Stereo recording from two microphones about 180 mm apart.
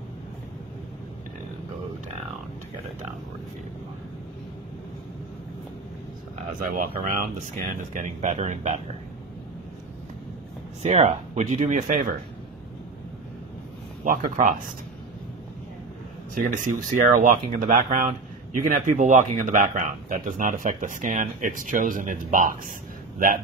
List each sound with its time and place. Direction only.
6.7 s speech: 50° right (ahead or behind)
10.8 s speech: 40° right (ahead or behind)
14.0 s speech: 50° right (ahead or behind)
16.3 s speech: 45° right (ahead or behind)